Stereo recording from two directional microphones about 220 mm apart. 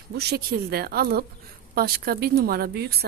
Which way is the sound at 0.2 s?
45° right (ahead or behind).